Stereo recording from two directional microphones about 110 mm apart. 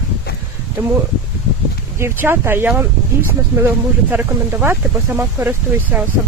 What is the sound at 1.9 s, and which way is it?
Speech, 20° right (ahead or behind).